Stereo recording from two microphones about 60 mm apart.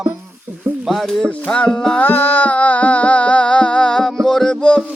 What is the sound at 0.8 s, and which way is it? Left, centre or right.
Speech, centre.